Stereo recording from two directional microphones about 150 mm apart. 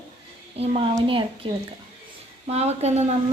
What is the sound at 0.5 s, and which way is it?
Speech, 45° right (ahead or behind).